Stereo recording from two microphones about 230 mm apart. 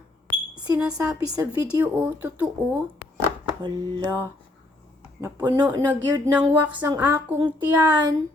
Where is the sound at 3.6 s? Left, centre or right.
Centre.